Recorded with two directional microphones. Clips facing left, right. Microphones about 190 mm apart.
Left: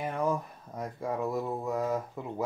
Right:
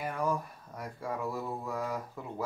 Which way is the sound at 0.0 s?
20° left (ahead or behind).